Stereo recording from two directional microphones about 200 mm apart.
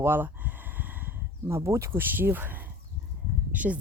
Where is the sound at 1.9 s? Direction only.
10° right (ahead or behind).